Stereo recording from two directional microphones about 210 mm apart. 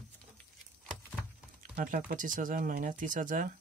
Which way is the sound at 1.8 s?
40° right (ahead or behind).